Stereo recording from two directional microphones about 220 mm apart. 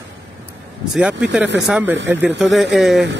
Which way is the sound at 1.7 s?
5° right (ahead or behind).